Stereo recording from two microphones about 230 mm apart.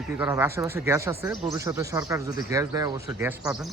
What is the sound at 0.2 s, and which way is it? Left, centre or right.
Speech, centre.